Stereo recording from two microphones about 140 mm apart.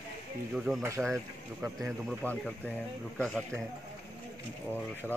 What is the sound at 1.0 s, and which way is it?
Speech, 5° right (ahead or behind).